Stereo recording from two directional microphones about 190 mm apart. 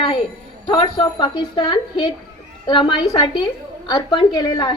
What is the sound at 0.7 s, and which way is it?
A woman's voice, 25° left (ahead or behind).